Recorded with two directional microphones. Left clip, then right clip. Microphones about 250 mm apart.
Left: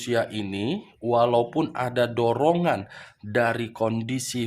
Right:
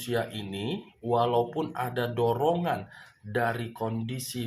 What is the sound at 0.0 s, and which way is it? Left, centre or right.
Speech, left.